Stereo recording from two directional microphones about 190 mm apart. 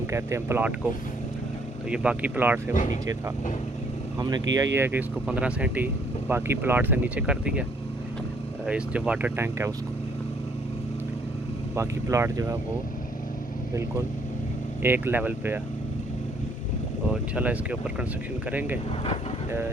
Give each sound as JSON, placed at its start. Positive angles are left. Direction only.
{"t": 0.1, "sound": "speech", "side_deg": -15}
{"t": 1.9, "sound": "speech", "side_deg": -5}
{"t": 4.2, "sound": "speech", "side_deg": -20}
{"t": 8.6, "sound": "speech", "side_deg": -5}
{"t": 11.7, "sound": "speech", "side_deg": -15}
{"t": 14.8, "sound": "speech", "side_deg": -10}
{"t": 17.3, "sound": "speech", "side_deg": -5}